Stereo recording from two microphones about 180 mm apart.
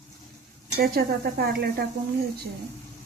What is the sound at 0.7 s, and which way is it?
Speech, 60° right (ahead or behind).